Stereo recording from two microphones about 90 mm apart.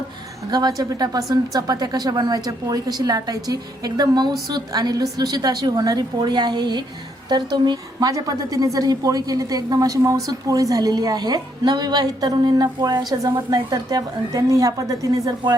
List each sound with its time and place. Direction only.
0.5 s a woman's voice: 45° right (ahead or behind)